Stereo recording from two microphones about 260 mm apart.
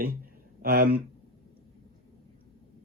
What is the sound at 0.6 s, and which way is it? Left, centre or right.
Speech, right.